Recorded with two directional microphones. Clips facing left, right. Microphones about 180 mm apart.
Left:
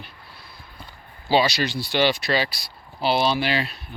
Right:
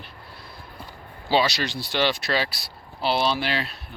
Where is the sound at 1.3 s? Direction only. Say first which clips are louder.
Left 2 dB; centre (ahead or behind).